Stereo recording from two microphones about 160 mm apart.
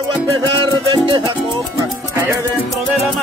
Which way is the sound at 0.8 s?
30° right (ahead or behind).